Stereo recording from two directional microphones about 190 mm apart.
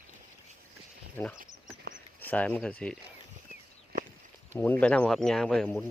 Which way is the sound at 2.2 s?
5° left (ahead or behind).